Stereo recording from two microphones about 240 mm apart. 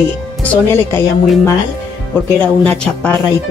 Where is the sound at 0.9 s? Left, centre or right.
Centre.